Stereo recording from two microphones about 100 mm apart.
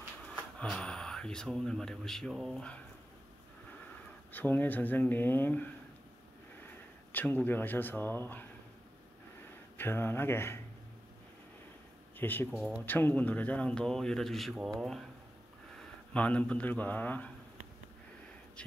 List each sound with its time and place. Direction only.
0.6 s speech: 10° left (ahead or behind)
4.3 s speech: 20° left (ahead or behind)
7.1 s speech: 20° left (ahead or behind)
9.8 s speech: 20° left (ahead or behind)
12.2 s speech: 20° left (ahead or behind)
12.4 s speech: 5° left (ahead or behind)
12.8 s speech: 20° left (ahead or behind)